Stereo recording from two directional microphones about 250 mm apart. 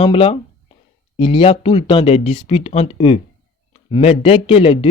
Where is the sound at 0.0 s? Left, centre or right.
Left.